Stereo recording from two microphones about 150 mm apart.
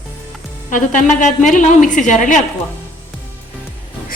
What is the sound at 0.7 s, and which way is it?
A woman's voice, 55° left (ahead or behind).